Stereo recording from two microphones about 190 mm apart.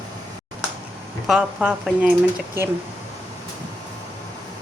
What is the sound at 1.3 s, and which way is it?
Speech, 5° right (ahead or behind).